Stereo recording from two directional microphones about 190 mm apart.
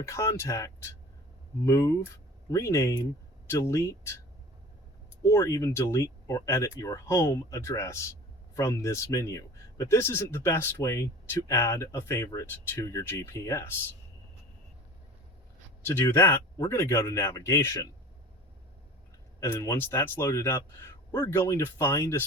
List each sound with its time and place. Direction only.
0.0 s speech: 15° left (ahead or behind)
5.2 s speech: 15° left (ahead or behind)
16.0 s speech: 10° left (ahead or behind)
19.4 s speech: 10° left (ahead or behind)